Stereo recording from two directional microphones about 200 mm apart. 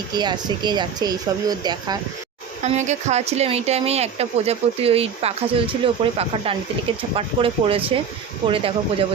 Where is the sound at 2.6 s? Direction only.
35° right (ahead or behind).